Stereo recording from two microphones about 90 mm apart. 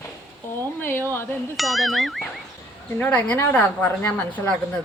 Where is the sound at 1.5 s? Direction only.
Centre (ahead or behind).